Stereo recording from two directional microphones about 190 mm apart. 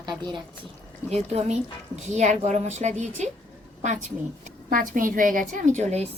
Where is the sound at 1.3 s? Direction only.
35° right (ahead or behind).